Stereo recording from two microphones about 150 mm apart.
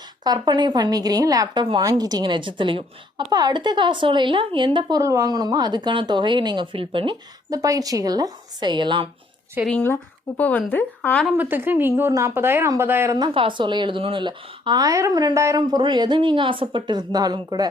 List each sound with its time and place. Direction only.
0.3 s a woman's voice: 30° right (ahead or behind)
9.6 s speech: 10° left (ahead or behind)
11.3 s speech: 15° right (ahead or behind)